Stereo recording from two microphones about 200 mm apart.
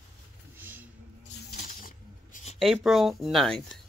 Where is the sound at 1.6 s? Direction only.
40° left (ahead or behind).